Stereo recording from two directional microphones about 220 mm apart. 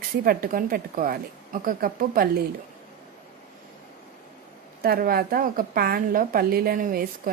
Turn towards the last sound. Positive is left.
turn(degrees=-40)  # may be behind; listen again after turning